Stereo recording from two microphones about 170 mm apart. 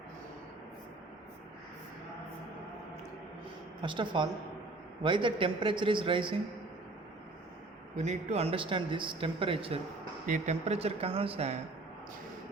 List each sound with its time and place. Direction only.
3.8 s a man's voice: 30° right (ahead or behind)
7.9 s speech: 40° right (ahead or behind)
10.2 s speech: 45° right (ahead or behind)